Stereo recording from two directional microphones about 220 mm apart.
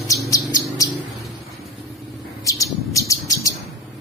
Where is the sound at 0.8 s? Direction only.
15° left (ahead or behind).